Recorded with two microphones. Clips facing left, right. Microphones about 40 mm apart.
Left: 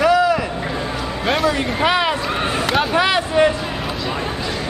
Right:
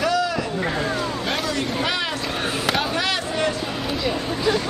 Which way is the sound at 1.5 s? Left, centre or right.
Left.